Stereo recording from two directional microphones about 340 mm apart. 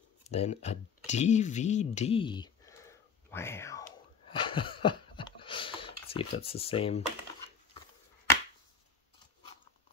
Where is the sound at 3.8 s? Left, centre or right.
Centre.